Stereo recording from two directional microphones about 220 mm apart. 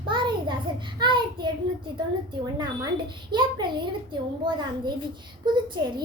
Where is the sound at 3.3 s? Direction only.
20° right (ahead or behind).